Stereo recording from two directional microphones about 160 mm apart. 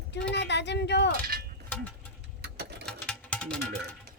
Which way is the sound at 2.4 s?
90° right.